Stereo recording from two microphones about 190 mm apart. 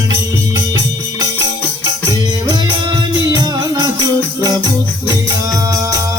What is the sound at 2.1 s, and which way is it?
Music, 20° right (ahead or behind).